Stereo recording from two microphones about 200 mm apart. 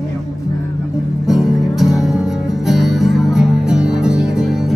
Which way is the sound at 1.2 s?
Centre (ahead or behind).